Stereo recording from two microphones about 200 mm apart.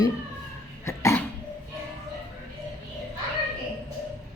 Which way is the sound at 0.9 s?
15° left (ahead or behind).